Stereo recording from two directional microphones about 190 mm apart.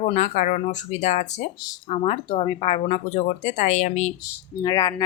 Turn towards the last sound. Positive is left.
turn(degrees=20)  # may be behind; listen again after turning